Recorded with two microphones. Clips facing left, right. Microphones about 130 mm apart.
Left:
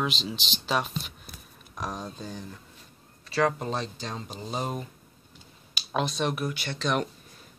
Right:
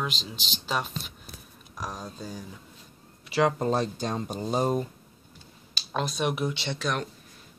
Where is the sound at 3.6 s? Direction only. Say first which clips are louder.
Right 6 dB; 45° right (ahead or behind).